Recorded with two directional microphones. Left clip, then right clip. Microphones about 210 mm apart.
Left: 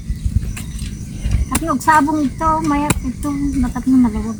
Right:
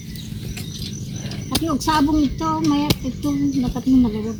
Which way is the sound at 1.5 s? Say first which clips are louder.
Left 6 dB; 20° left (ahead or behind).